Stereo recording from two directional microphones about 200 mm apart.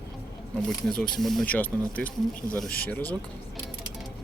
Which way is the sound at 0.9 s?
5° left (ahead or behind).